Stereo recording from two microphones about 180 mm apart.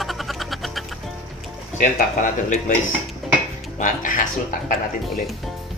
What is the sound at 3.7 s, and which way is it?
Speech, 45° left (ahead or behind).